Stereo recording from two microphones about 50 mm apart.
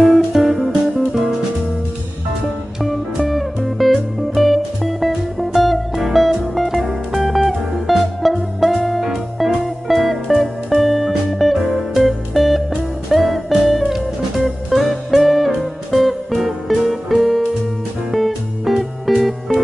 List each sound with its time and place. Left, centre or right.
0.0 s music: centre
2.8 s music: centre
11.6 s music: centre
12.0 s music: centre